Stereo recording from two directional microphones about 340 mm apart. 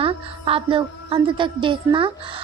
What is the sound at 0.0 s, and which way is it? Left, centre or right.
Music, centre.